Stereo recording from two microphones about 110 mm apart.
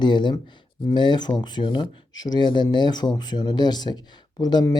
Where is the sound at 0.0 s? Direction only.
45° left (ahead or behind).